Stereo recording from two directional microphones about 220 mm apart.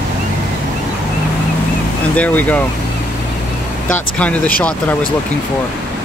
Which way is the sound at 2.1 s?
5° left (ahead or behind).